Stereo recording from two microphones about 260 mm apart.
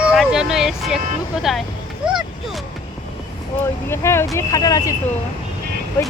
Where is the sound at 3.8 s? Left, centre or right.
Centre.